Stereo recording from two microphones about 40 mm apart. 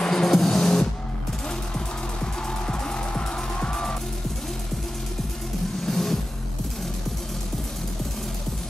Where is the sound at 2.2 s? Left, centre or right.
Left.